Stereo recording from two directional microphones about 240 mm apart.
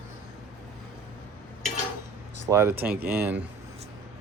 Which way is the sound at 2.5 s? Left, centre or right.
Centre.